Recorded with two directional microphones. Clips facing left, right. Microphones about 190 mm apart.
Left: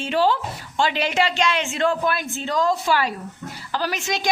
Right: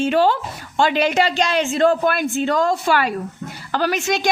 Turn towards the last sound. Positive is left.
turn(degrees=-55)  # may be behind; listen again after turning